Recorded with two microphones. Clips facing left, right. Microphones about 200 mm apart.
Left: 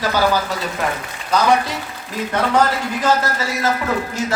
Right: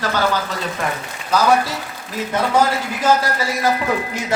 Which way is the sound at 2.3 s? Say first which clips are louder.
Even; 10° right (ahead or behind).